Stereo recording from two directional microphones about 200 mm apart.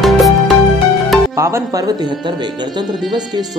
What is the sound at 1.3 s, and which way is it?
Speech, 15° right (ahead or behind).